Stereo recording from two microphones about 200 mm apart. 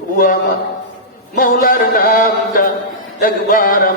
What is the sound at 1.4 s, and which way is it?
Mantra, 45° left (ahead or behind).